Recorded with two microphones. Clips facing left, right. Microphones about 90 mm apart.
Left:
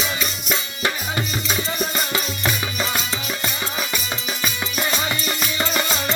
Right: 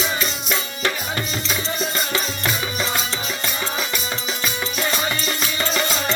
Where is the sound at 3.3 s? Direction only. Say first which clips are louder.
Right 1 dB; 15° left (ahead or behind).